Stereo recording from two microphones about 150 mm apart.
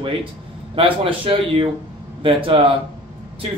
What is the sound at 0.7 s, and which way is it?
Speech, 35° right (ahead or behind).